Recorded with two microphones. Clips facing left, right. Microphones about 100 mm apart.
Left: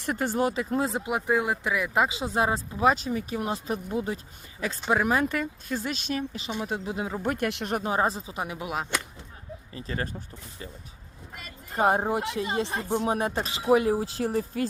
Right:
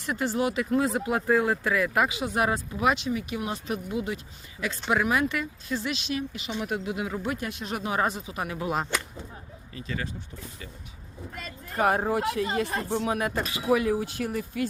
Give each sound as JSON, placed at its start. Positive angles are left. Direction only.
{"t": 0.0, "sound": "speech", "side_deg": 50}
{"t": 2.9, "sound": "speech", "side_deg": 40}
{"t": 6.6, "sound": "speech", "side_deg": 25}
{"t": 7.2, "sound": "speech", "side_deg": 55}
{"t": 7.9, "sound": "speech", "side_deg": 30}
{"t": 8.4, "sound": "speech", "side_deg": 15}
{"t": 8.7, "sound": "speech", "side_deg": 0}
{"t": 9.7, "sound": "speech", "side_deg": 35}
{"t": 11.7, "sound": "speech", "side_deg": 25}